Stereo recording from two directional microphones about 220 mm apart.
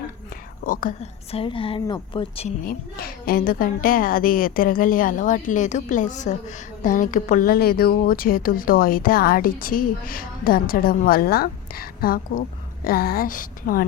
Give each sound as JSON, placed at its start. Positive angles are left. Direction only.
{"t": 0.6, "sound": "speech", "side_deg": 40}
{"t": 1.4, "sound": "a woman's voice", "side_deg": 25}
{"t": 2.6, "sound": "speech", "side_deg": 40}